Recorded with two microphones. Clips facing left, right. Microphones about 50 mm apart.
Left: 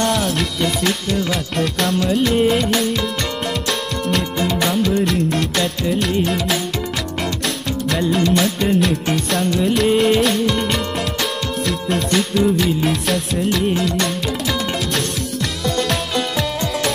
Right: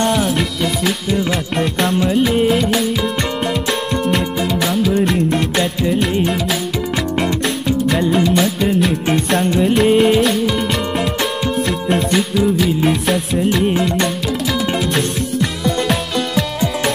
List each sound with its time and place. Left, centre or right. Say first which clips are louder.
0.0 s music: right 2 dB; centre
1.1 s music: right 2 dB; centre
4.1 s music: left 2 dB; centre
4.9 s music: right 2 dB; centre
9.4 s music: right 3 dB; right
9.9 s music: right 2 dB; centre
11.6 s music: right 1 dB; centre
13.5 s music: right 2 dB; centre
15.6 s music: even; centre